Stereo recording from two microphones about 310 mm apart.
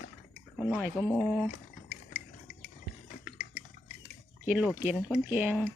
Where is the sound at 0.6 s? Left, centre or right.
Centre.